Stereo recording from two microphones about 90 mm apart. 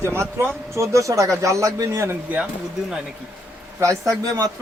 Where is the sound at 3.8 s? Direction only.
35° right (ahead or behind).